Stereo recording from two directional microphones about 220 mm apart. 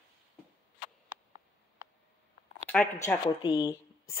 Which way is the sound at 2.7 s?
10° left (ahead or behind).